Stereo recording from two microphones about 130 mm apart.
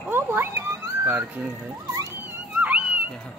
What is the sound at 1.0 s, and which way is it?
Speech, 15° right (ahead or behind).